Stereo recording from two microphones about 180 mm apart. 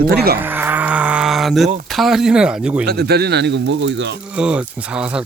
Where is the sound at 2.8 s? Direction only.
65° right (ahead or behind); by 4.2 s 80° right.